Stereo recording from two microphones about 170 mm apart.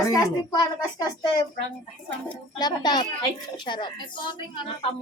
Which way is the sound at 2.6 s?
25° left (ahead or behind).